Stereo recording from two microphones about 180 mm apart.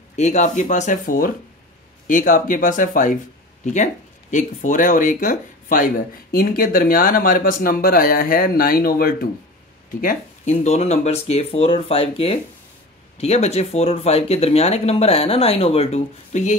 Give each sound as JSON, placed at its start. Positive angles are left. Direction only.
{"t": 0.1, "sound": "speech", "side_deg": 40}
{"t": 10.0, "sound": "speech", "side_deg": 40}